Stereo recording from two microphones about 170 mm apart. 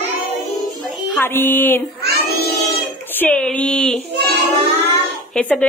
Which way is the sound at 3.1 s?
10° left (ahead or behind).